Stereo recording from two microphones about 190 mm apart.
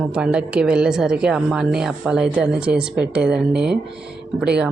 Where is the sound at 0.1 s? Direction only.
5° right (ahead or behind).